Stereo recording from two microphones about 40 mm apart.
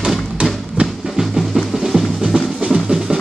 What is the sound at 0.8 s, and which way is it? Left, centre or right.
Music, right.